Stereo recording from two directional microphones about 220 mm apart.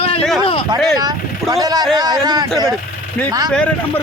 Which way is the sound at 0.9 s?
20° right (ahead or behind).